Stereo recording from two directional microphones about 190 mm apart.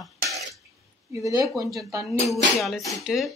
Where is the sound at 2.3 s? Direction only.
Centre (ahead or behind).